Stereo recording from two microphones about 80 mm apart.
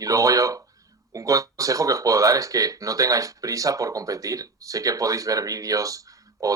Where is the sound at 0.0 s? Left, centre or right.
Right.